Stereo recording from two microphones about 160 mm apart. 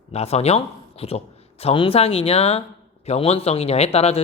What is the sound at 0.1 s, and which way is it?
Speech, 40° left (ahead or behind).